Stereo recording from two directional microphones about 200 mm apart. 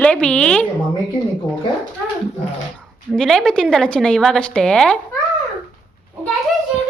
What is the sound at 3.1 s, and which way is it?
A woman's voice, 5° left (ahead or behind).